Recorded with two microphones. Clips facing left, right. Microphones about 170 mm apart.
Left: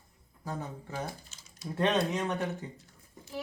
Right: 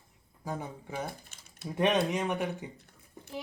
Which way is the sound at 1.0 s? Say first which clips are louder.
Even; 55° right (ahead or behind).